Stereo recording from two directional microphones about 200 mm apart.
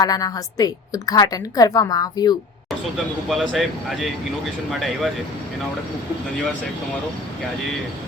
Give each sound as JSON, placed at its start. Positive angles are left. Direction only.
{"t": 0.0, "sound": "a woman's voice", "side_deg": 20}
{"t": 3.2, "sound": "speech", "side_deg": 0}